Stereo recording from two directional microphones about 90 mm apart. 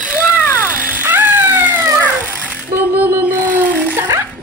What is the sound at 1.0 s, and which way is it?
Music, 20° right (ahead or behind).